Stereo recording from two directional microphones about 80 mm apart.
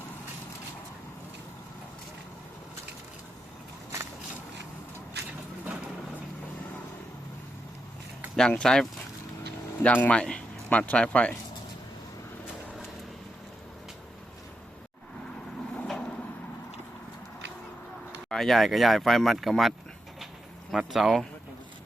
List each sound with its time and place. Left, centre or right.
3.9 s a sound: right
5.6 s vehicle: centre
8.4 s speech: centre
9.8 s speech: centre
15.9 s vehicle: centre
18.3 s speech: centre
20.7 s speech: centre